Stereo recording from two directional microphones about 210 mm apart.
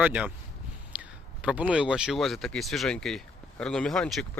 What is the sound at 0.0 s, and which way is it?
A man's voice, 5° right (ahead or behind).